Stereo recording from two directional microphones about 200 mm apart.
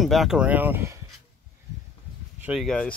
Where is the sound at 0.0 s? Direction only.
Centre (ahead or behind).